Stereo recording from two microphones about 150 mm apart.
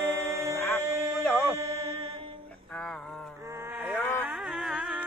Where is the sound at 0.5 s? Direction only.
15° left (ahead or behind).